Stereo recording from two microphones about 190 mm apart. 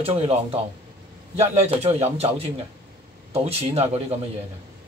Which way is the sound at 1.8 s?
35° right (ahead or behind).